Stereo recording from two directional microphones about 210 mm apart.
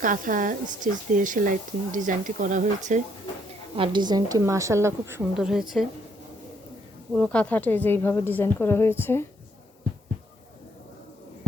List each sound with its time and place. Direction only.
0.0 s speech: 40° right (ahead or behind)
3.8 s a woman's voice: 20° right (ahead or behind); by 5.8 s centre (ahead or behind)
7.1 s a woman's voice: 5° left (ahead or behind)